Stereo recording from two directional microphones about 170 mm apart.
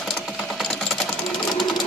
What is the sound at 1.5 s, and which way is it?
Sewing machine, centre (ahead or behind).